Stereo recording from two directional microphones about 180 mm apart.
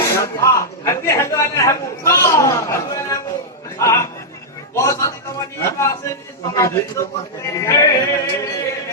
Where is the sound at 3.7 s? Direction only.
15° left (ahead or behind).